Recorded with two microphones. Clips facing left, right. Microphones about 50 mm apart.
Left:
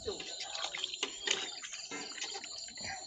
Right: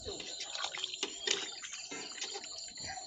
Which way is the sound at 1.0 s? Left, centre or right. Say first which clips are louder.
Left 1 dB; left.